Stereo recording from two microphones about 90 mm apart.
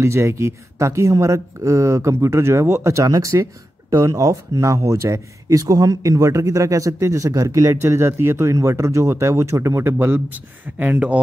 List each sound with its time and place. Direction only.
0.0 s speech: 30° right (ahead or behind); by 11.1 s 15° right (ahead or behind)